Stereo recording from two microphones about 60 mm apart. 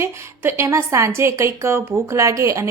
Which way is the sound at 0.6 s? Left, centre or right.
Right.